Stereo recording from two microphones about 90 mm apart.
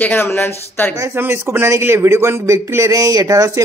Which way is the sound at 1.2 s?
25° right (ahead or behind).